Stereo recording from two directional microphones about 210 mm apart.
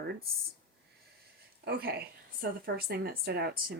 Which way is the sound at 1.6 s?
45° right (ahead or behind).